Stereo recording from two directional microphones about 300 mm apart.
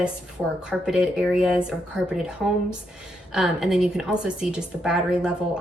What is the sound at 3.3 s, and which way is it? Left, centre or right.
A woman's voice, centre.